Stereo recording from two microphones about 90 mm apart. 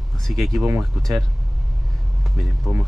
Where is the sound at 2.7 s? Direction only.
10° right (ahead or behind).